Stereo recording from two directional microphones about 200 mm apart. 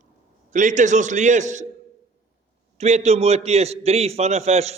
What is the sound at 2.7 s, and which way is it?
A man's voice, 35° right (ahead or behind).